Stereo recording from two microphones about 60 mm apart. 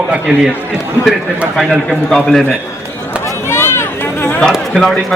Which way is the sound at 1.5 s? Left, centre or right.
Centre.